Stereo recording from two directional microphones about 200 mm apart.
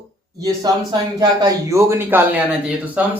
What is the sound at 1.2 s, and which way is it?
Speech, 20° right (ahead or behind).